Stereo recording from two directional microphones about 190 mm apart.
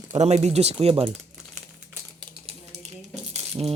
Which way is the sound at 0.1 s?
35° right (ahead or behind).